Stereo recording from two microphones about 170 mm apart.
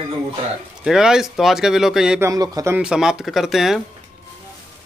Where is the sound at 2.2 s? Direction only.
20° right (ahead or behind).